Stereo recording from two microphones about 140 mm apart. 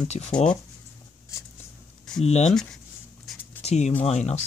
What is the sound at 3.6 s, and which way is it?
Speech, 50° left (ahead or behind).